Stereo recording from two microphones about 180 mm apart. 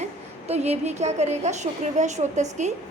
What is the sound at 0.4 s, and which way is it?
A woman's voice, 35° right (ahead or behind).